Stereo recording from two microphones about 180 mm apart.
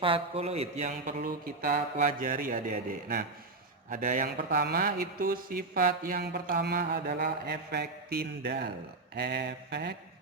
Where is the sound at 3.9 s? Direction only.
45° right (ahead or behind); by 9.9 s 65° right (ahead or behind).